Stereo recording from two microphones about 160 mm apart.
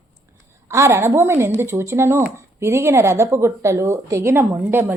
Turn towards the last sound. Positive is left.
turn(degrees=-15)  # may be behind; listen again after turning